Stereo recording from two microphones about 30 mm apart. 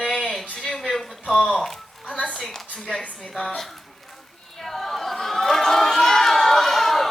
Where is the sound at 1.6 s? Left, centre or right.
Centre.